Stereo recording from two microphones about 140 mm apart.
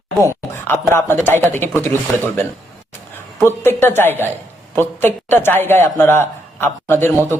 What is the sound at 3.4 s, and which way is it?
Speech, 15° left (ahead or behind).